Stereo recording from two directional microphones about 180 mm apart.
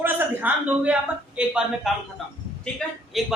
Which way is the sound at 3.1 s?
Centre (ahead or behind).